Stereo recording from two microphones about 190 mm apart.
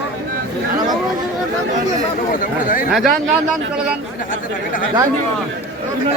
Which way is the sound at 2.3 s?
45° left (ahead or behind).